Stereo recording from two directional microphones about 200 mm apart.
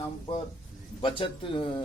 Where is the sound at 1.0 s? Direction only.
25° left (ahead or behind).